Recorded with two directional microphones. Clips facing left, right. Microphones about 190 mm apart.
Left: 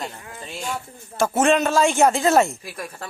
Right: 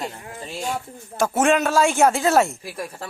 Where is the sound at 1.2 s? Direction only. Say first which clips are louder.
Left 1 dB; 10° right (ahead or behind).